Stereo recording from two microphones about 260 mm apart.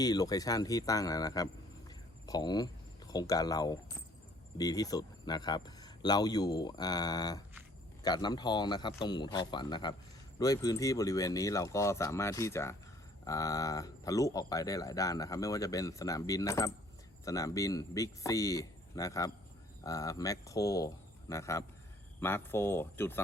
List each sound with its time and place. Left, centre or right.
0.0 s speech: centre